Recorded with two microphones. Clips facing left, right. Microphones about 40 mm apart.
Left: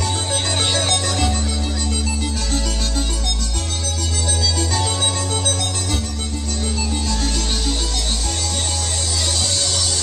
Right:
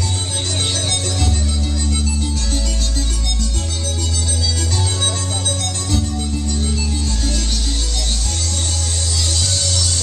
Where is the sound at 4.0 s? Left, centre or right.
Left.